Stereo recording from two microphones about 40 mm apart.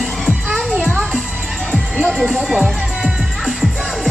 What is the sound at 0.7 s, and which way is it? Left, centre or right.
Music, right.